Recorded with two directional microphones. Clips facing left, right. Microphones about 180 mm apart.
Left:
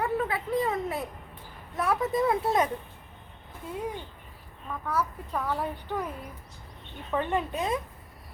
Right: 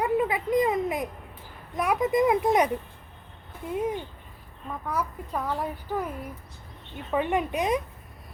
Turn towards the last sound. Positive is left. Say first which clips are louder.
# right 3 dB
turn(degrees=-15)  # may be behind; listen again after turning